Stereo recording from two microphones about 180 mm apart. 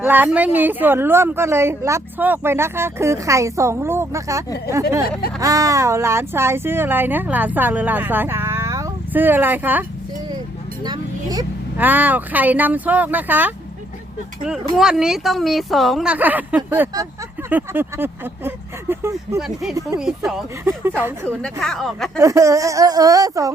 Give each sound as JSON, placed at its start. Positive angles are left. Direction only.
{"t": 0.0, "sound": "a woman's voice", "side_deg": -10}
{"t": 10.8, "sound": "a sound", "side_deg": -20}
{"t": 11.8, "sound": "a woman's voice", "side_deg": -10}
{"t": 14.8, "sound": "a woman's voice", "side_deg": -5}
{"t": 19.4, "sound": "speech", "side_deg": 0}
{"t": 21.2, "sound": "speech", "side_deg": 5}
{"t": 22.2, "sound": "a woman's voice", "side_deg": -15}